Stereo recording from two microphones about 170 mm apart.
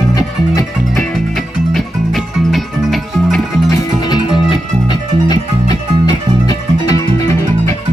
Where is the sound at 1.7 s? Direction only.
Centre (ahead or behind).